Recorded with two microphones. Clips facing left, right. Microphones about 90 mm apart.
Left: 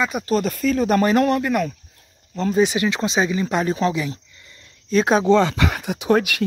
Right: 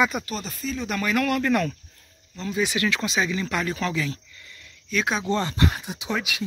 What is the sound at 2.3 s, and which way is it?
Speech, 45° left (ahead or behind).